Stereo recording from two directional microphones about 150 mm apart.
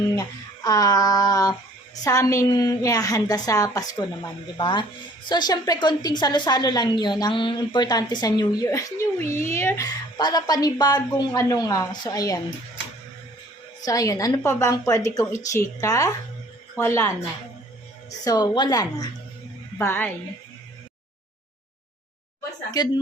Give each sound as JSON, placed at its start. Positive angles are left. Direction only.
{"t": 0.2, "sound": "a woman's voice", "side_deg": 25}
{"t": 13.8, "sound": "a woman's voice", "side_deg": 25}
{"t": 19.8, "sound": "a woman's voice", "side_deg": 15}